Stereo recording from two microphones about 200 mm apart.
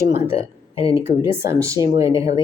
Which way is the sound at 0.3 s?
30° left (ahead or behind).